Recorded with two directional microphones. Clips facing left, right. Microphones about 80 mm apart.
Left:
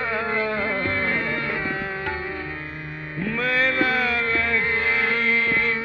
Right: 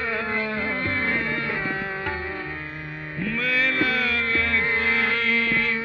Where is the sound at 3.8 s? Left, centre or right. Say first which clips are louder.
Left 2 dB; left.